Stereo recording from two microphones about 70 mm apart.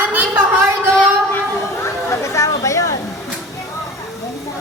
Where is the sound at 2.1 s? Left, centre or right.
Left.